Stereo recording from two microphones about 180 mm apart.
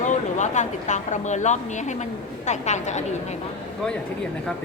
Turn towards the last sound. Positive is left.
turn(degrees=40)  # may be behind; listen again after turning